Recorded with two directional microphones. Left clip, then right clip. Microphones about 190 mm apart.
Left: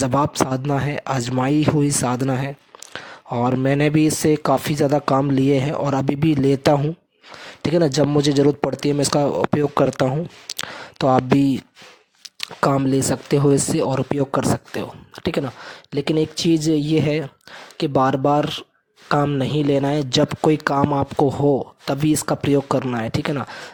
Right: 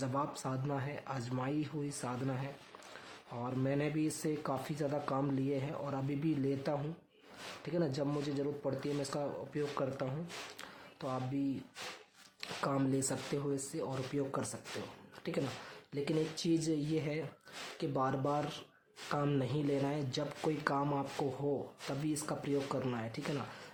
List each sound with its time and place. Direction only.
0.0 s speech: 55° left (ahead or behind)